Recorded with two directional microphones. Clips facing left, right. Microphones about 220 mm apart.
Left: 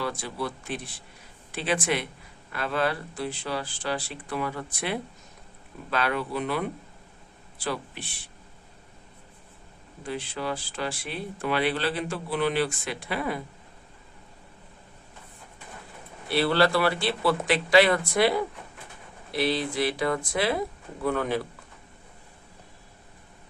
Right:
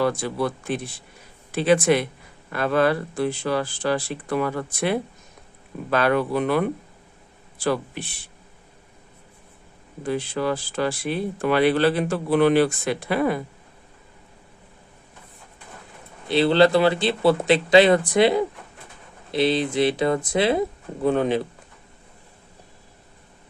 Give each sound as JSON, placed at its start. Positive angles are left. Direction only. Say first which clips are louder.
{"t": 0.0, "sound": "speech", "louder": "right 8 dB", "side_deg": -50}
{"t": 7.6, "sound": "speech", "louder": "right 8 dB", "side_deg": -45}
{"t": 10.1, "sound": "speech", "louder": "right 7 dB", "side_deg": -45}
{"t": 16.3, "sound": "speech", "louder": "right 6 dB", "side_deg": -20}